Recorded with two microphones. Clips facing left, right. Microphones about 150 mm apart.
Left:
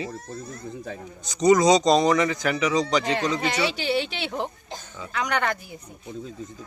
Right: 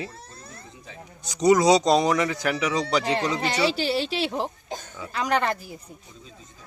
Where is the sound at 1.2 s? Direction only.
10° right (ahead or behind).